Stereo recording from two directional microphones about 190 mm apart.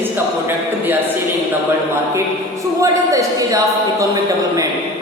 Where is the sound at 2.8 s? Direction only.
15° right (ahead or behind).